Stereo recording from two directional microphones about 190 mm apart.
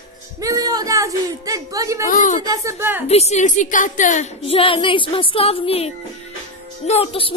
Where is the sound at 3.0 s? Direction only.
35° left (ahead or behind).